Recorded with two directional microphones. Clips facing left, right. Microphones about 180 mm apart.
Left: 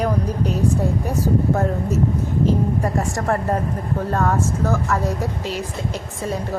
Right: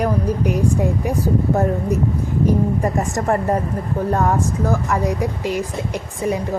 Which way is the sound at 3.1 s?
10° right (ahead or behind).